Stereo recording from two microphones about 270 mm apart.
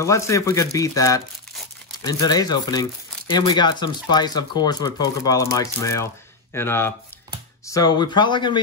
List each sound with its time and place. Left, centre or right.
0.0 s speech: centre